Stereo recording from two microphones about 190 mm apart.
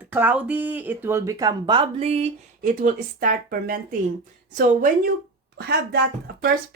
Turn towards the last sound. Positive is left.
turn(degrees=-60)  # may be behind; listen again after turning